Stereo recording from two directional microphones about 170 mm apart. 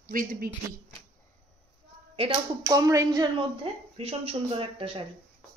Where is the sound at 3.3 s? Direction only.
35° right (ahead or behind).